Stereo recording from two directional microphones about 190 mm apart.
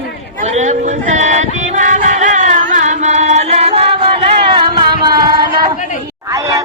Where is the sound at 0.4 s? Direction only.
35° right (ahead or behind).